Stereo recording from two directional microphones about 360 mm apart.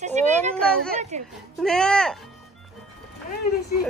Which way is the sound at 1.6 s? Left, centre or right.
Centre.